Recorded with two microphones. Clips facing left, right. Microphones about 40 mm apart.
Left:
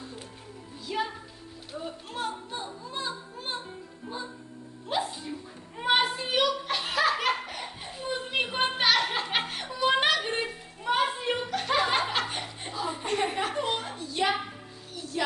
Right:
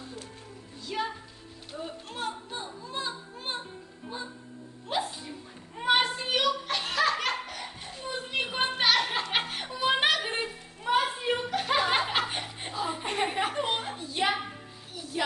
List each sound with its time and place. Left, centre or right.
0.9 s music: centre
4.9 s music: centre
5.7 s children playing: centre
8.5 s a sound: centre
11.5 s chuckle: centre
13.6 s a sound: right; by 15.3 s centre